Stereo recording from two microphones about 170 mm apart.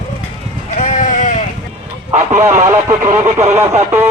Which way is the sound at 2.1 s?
40° right (ahead or behind).